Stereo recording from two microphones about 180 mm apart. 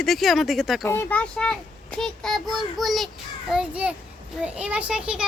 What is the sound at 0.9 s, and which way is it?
A child's voice, 10° left (ahead or behind).